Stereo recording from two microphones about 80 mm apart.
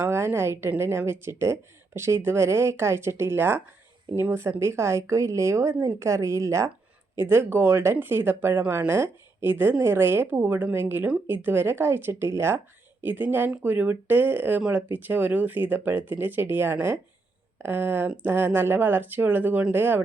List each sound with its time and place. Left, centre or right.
0.0 s a woman's voice: right